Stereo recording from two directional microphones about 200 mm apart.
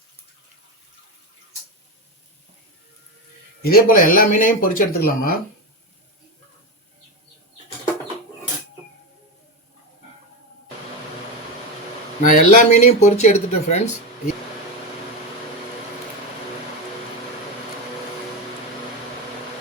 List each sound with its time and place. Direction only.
3.6 s speech: 45° left (ahead or behind)
12.3 s speech: 40° left (ahead or behind)